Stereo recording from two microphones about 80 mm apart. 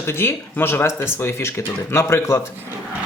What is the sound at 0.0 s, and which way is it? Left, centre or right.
Speech, left.